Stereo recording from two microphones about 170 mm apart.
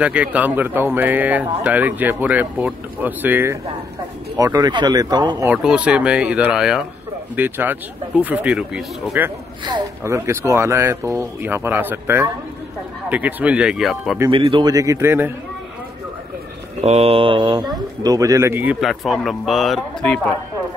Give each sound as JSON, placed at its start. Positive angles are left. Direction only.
{"t": 0.0, "sound": "speech", "side_deg": -10}
{"t": 4.4, "sound": "speech", "side_deg": -20}
{"t": 5.5, "sound": "speech", "side_deg": -5}
{"t": 14.3, "sound": "speech", "side_deg": -30}
{"t": 16.8, "sound": "speech", "side_deg": -35}